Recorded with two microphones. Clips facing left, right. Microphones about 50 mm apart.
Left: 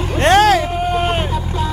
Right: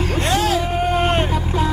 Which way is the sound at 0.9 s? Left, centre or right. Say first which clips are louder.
Right 1 dB; centre.